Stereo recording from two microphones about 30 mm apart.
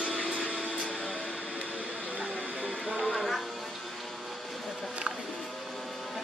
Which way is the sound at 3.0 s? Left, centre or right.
Centre.